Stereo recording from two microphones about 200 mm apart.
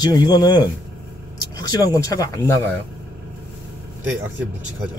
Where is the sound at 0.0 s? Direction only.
20° left (ahead or behind).